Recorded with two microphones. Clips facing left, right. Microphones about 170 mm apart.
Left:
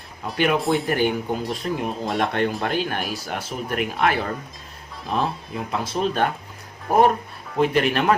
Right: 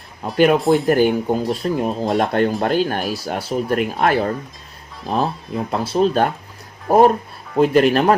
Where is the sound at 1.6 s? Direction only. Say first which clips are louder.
Right 5 dB; 35° right (ahead or behind).